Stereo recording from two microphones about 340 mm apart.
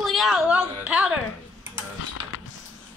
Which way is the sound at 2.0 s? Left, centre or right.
Left.